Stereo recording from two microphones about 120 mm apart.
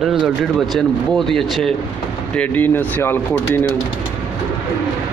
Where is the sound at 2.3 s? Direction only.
15° left (ahead or behind).